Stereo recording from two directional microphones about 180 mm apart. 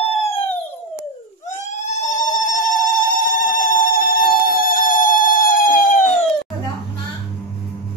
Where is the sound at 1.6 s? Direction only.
40° left (ahead or behind).